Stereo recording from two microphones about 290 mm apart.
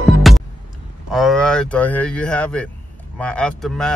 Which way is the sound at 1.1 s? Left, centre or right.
Centre.